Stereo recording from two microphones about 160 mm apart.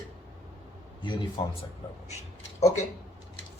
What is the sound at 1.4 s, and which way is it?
Speech, 30° left (ahead or behind).